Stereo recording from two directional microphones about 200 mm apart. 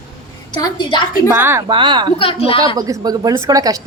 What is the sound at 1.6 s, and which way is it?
Speech, 25° right (ahead or behind).